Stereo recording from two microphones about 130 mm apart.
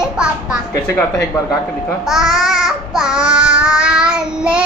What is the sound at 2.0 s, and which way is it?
Babbling, 5° right (ahead or behind).